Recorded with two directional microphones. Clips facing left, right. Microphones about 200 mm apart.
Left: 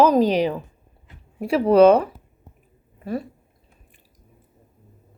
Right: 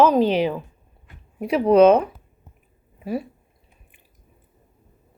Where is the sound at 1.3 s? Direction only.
Centre (ahead or behind).